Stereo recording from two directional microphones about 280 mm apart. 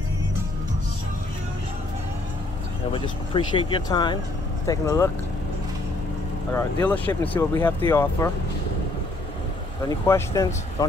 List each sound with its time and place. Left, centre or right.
2.9 s speech: centre
6.5 s speech: centre
9.8 s speech: centre